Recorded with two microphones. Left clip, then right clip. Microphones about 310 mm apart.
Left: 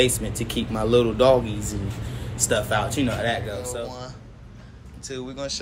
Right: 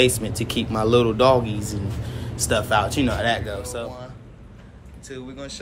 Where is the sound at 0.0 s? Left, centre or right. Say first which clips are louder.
Right 2 dB; centre.